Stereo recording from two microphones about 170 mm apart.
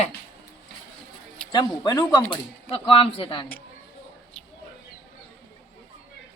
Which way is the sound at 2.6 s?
35° left (ahead or behind).